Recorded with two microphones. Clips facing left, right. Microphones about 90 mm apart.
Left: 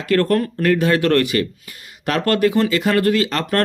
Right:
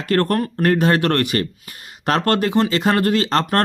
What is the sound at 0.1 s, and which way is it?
Speech, 50° right (ahead or behind).